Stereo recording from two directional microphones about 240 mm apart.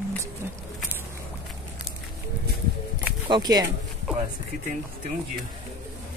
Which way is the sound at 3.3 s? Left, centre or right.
Centre.